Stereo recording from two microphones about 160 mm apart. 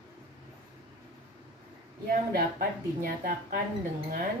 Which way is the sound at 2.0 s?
65° right (ahead or behind).